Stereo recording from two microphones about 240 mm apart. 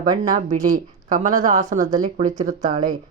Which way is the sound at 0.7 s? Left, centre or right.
Right.